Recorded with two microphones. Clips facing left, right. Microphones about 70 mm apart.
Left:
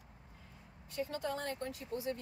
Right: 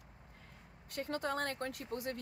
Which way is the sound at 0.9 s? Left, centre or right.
Right.